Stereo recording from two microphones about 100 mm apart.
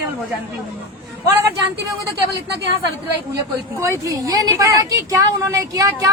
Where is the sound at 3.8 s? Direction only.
30° right (ahead or behind).